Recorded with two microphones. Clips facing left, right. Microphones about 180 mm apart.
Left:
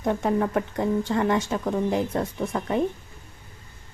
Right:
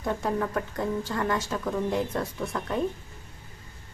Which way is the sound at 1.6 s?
20° left (ahead or behind).